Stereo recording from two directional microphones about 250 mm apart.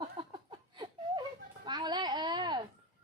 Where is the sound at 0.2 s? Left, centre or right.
Centre.